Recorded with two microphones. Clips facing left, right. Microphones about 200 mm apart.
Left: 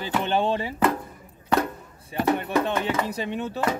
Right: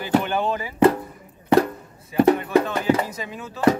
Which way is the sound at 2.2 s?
35° right (ahead or behind).